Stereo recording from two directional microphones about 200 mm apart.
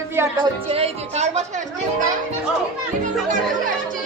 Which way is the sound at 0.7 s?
30° right (ahead or behind).